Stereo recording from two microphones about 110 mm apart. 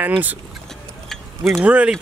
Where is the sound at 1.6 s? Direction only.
10° right (ahead or behind).